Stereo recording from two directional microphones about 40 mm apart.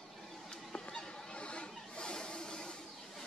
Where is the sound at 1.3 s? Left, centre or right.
Left.